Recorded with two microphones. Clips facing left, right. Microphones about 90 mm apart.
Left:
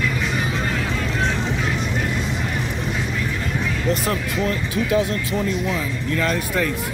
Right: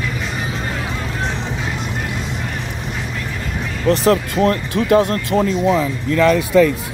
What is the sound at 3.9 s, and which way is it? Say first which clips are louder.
Speech: right 10 dB; 70° right (ahead or behind).